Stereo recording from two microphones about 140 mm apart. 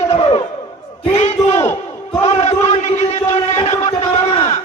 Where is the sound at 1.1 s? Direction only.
50° left (ahead or behind).